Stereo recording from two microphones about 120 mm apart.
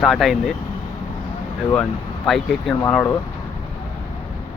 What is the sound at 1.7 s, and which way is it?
Speech, 5° left (ahead or behind).